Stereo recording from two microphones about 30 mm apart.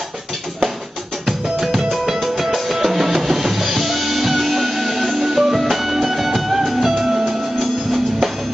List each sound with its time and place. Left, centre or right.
1.6 s music: centre
7.1 s music: right